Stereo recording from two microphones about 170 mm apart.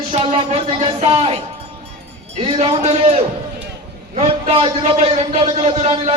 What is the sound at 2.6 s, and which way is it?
Speech, 40° right (ahead or behind).